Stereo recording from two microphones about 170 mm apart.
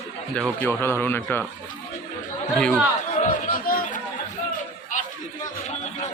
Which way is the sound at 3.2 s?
55° left (ahead or behind).